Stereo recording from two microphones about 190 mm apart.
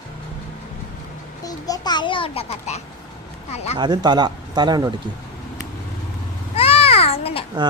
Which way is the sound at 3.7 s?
25° right (ahead or behind).